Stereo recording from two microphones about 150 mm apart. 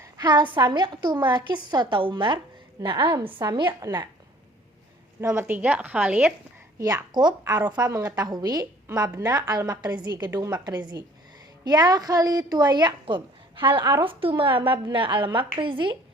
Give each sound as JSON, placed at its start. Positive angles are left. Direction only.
{"t": 0.0, "sound": "a sound", "side_deg": -25}
{"t": 0.5, "sound": "a woman's voice", "side_deg": -30}
{"t": 5.2, "sound": "a woman's voice", "side_deg": -15}
{"t": 6.7, "sound": "a woman's voice", "side_deg": -25}